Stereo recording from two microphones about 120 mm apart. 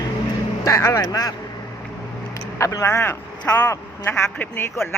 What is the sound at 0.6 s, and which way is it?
Speech, 30° left (ahead or behind).